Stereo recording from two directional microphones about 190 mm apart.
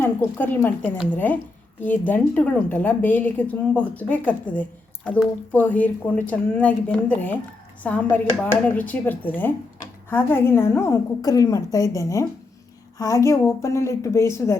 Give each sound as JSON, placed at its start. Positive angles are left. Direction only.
{"t": 0.0, "sound": "speech", "side_deg": 10}